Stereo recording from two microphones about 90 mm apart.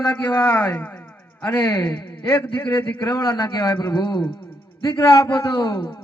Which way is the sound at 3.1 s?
45° left (ahead or behind).